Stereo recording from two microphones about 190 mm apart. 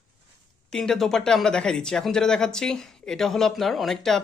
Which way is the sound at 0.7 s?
Centre (ahead or behind).